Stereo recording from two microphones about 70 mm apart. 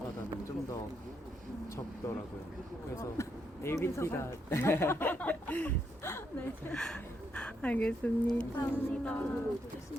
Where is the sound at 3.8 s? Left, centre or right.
Left.